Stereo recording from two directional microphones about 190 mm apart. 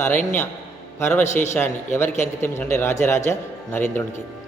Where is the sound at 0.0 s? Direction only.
10° left (ahead or behind).